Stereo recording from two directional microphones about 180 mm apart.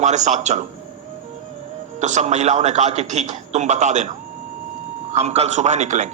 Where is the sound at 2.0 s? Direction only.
40° right (ahead or behind).